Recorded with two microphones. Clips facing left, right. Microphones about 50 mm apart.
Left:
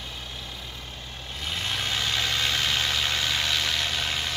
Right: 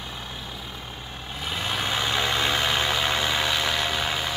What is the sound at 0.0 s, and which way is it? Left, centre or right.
Vehicle, centre.